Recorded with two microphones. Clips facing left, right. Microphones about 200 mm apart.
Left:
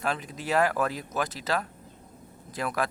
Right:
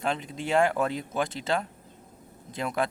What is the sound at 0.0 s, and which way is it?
Speech, 25° right (ahead or behind).